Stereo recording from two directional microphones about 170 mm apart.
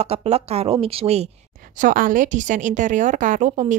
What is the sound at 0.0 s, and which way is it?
Speech, 35° right (ahead or behind).